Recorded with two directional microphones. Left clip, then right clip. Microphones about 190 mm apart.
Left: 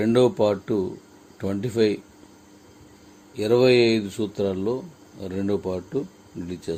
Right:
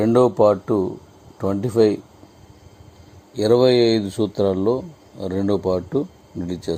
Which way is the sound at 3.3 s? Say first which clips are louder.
Right 3 dB; 30° right (ahead or behind).